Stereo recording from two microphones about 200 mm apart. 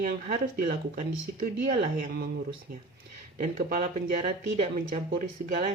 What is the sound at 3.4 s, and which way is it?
Speech, 45° right (ahead or behind).